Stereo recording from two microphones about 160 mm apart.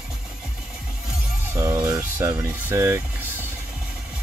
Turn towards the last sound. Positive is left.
turn(degrees=-15)  # may be behind; listen again after turning